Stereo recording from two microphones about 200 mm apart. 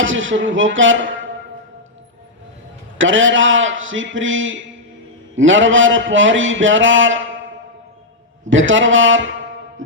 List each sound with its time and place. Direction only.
0.0 s a man's voice: 70° right (ahead or behind)
3.0 s a man's voice: 70° right (ahead or behind)